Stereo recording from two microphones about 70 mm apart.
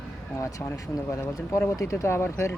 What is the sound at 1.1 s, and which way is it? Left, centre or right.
Speech, left.